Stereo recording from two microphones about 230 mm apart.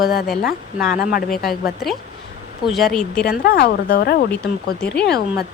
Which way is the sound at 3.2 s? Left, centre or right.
Left.